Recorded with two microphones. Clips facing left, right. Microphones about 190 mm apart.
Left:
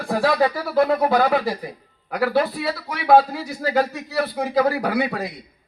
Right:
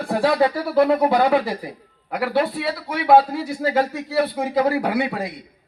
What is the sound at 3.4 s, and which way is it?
A man's voice, 25° right (ahead or behind).